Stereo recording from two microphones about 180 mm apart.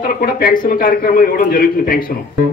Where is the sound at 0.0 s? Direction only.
50° left (ahead or behind).